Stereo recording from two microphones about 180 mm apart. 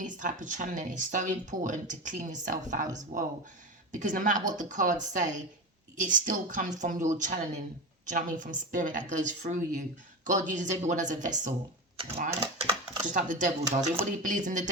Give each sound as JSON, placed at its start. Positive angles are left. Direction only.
{"t": 0.0, "sound": "speech", "side_deg": -45}
{"t": 13.1, "sound": "speech", "side_deg": -45}